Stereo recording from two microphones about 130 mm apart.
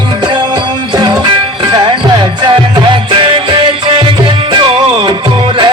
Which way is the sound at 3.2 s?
40° right (ahead or behind).